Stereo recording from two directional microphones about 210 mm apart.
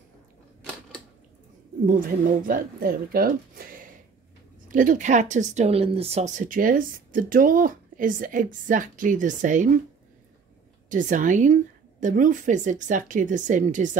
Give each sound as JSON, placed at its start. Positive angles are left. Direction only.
{"t": 1.9, "sound": "speech", "side_deg": -40}
{"t": 10.9, "sound": "speech", "side_deg": -40}